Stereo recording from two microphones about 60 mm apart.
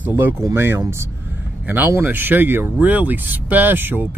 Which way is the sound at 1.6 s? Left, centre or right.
Right.